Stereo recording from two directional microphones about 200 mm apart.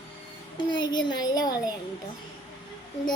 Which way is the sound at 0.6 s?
20° left (ahead or behind).